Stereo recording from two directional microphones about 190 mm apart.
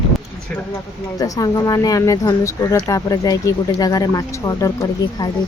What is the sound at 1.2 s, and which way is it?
Speech, 20° left (ahead or behind).